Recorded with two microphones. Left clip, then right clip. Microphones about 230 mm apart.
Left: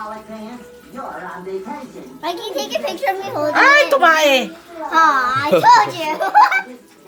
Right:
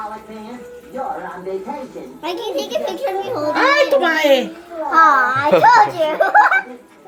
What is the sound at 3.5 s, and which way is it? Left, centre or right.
Speech, left.